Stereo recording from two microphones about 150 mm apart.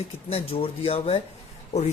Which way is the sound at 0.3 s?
40° left (ahead or behind).